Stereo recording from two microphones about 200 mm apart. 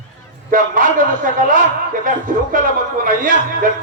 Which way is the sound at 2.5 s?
45° right (ahead or behind).